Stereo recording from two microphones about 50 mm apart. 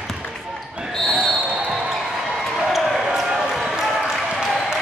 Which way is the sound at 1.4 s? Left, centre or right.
Right.